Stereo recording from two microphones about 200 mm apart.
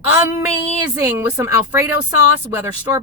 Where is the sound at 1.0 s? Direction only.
15° right (ahead or behind).